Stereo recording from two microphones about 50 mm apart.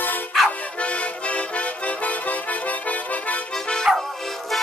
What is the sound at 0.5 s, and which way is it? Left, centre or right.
Music, left.